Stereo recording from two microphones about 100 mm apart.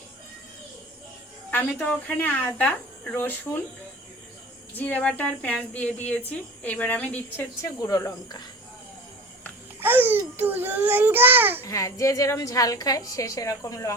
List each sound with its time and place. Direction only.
1.5 s cricket: 15° left (ahead or behind)
2.1 s speech: 20° left (ahead or behind)
4.8 s speech: 15° left (ahead or behind)
7.6 s a woman's voice: 35° left (ahead or behind)
9.8 s a child's voice: 20° right (ahead or behind)
11.6 s a woman's voice: 35° left (ahead or behind)